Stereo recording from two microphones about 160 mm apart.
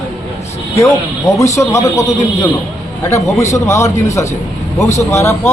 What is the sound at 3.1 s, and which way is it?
A man's voice, 20° left (ahead or behind).